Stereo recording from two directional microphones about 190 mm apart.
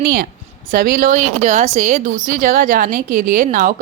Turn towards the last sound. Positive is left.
turn(degrees=-45)  # may be behind; listen again after turning